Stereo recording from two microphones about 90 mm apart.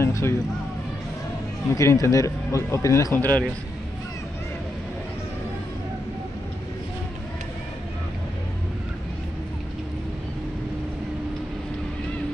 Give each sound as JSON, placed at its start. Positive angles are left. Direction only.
{"t": 0.0, "sound": "speech", "side_deg": 30}
{"t": 1.8, "sound": "speech", "side_deg": 35}
{"t": 3.2, "sound": "a man's voice", "side_deg": 20}